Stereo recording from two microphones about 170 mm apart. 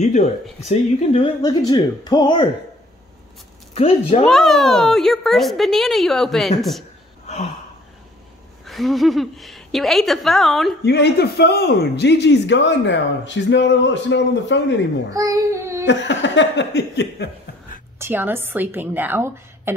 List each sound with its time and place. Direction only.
0.0 s speech: 45° left (ahead or behind); by 2.4 s 25° left (ahead or behind)
3.7 s speech: 35° left (ahead or behind)
4.3 s a woman's voice: centre (ahead or behind)
7.2 s a sound: 40° left (ahead or behind)
8.6 s a woman's voice: centre (ahead or behind)
10.8 s speech: 75° left (ahead or behind)
15.0 s a child's voice: 20° right (ahead or behind)
15.9 s speech: 90° left
17.9 s a woman's voice: 15° right (ahead or behind)